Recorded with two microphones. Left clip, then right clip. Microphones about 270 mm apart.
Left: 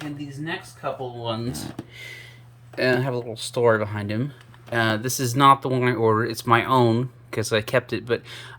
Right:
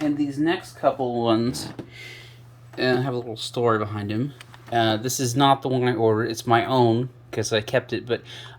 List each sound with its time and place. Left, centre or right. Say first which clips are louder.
0.4 s speech: right 7 dB; centre
6.0 s speech: left 1 dB; left
6.2 s speech: left 1 dB; centre